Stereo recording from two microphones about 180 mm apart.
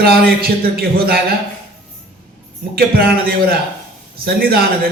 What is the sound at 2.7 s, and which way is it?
A man's voice, 55° right (ahead or behind).